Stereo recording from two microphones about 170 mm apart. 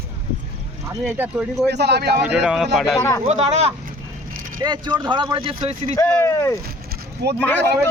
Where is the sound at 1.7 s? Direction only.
75° right (ahead or behind).